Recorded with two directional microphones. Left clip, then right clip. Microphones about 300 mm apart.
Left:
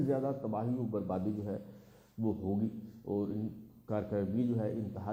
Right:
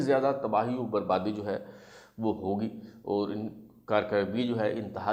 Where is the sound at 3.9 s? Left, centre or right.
Centre.